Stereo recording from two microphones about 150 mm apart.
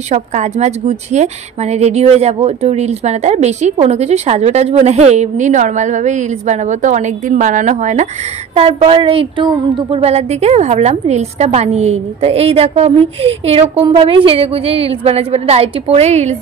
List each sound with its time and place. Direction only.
0.1 s a woman's voice: 50° right (ahead or behind)
8.5 s a woman's voice: 40° right (ahead or behind)